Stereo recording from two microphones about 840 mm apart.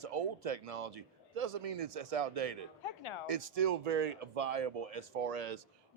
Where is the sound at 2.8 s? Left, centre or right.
Left.